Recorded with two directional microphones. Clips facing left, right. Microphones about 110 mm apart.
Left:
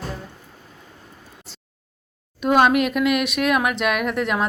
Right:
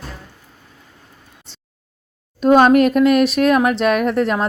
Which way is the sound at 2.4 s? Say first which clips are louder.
Right 6 dB; 40° right (ahead or behind).